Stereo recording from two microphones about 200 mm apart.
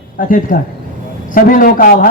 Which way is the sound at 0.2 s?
45° left (ahead or behind).